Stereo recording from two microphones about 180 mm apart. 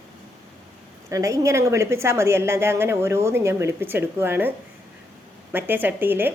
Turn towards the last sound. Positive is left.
turn(degrees=-10)  # may be behind; listen again after turning